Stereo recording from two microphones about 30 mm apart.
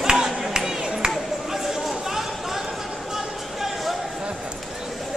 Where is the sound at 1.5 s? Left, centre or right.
Centre.